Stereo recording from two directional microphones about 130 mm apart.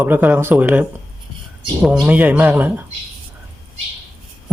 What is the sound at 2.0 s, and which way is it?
Speech, 10° right (ahead or behind).